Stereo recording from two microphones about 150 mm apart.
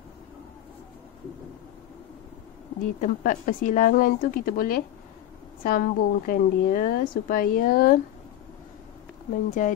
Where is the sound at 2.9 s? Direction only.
60° left (ahead or behind); by 8.0 s 85° left.